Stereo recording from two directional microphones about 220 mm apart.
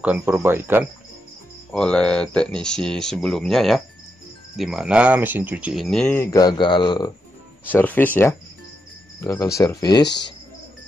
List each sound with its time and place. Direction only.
0.0 s speech: 10° right (ahead or behind)
1.7 s speech: 5° left (ahead or behind); by 7.1 s 20° left (ahead or behind)
7.7 s speech: 10° left (ahead or behind)
10.0 s speech: 50° left (ahead or behind)